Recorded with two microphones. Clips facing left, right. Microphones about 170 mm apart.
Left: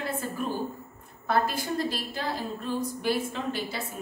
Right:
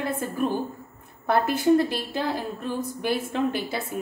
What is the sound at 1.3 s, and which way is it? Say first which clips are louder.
A woman's voice: right 7 dB; 60° right (ahead or behind).